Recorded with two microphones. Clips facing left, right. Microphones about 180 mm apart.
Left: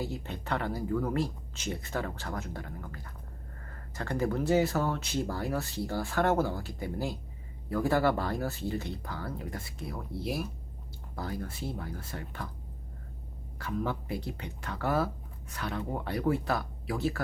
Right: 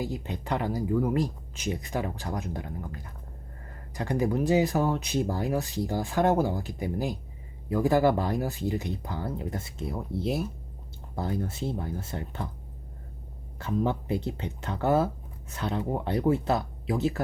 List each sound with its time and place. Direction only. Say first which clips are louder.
0.0 s speech: right 3 dB; 15° right (ahead or behind)
13.6 s speech: right 5 dB; 25° right (ahead or behind)